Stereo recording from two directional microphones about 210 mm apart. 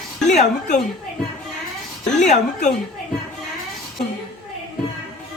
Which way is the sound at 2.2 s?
35° left (ahead or behind).